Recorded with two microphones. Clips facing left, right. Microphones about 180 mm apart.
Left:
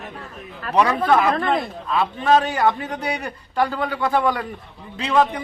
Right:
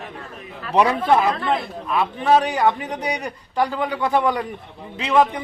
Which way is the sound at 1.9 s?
15° right (ahead or behind).